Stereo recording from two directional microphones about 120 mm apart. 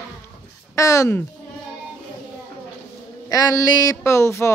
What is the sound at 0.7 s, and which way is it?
Speech, 25° left (ahead or behind).